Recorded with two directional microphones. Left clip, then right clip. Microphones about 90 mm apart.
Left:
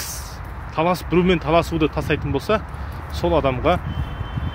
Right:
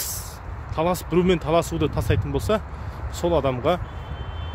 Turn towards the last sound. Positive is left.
turn(degrees=-40)  # may be behind; listen again after turning